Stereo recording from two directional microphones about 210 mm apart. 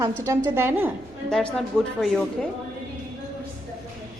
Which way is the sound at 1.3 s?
5° left (ahead or behind).